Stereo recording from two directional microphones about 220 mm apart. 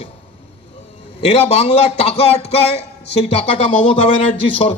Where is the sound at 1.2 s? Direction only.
25° left (ahead or behind).